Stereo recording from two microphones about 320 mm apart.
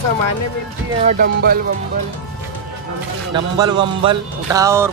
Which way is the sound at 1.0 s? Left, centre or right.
Right.